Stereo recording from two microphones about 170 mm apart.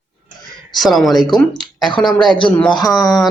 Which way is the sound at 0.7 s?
Centre (ahead or behind).